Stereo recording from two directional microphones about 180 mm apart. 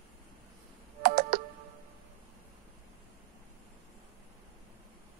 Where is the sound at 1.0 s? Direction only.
55° right (ahead or behind).